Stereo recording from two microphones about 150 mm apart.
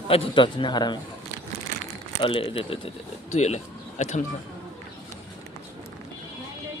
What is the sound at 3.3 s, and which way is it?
Speech, 50° left (ahead or behind).